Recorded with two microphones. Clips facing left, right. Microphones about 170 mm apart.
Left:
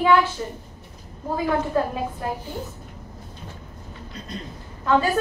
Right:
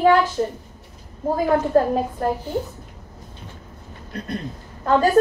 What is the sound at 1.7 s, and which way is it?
Speech, 45° right (ahead or behind).